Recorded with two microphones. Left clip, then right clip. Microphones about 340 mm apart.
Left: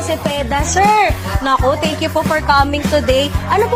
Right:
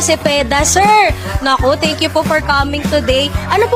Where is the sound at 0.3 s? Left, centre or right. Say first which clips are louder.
Right 5 dB; right.